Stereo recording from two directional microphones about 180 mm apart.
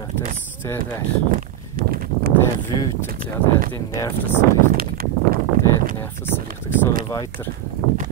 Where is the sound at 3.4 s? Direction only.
10° left (ahead or behind).